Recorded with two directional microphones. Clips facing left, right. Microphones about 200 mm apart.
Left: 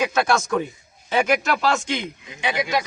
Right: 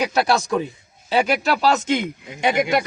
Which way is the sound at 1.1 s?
35° right (ahead or behind).